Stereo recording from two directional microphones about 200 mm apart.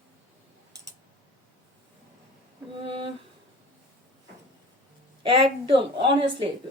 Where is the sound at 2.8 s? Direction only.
25° right (ahead or behind).